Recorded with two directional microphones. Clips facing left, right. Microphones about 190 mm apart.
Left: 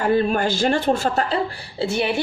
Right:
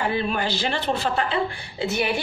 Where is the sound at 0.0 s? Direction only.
45° left (ahead or behind).